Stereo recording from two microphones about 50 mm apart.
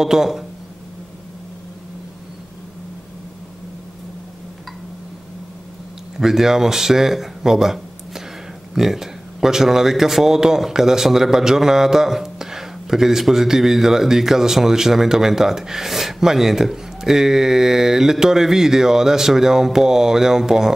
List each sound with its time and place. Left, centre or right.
0.0 s speech: centre
6.1 s speech: centre